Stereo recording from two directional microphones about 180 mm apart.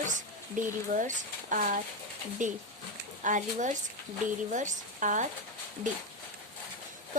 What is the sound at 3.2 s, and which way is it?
A woman's voice, 45° right (ahead or behind).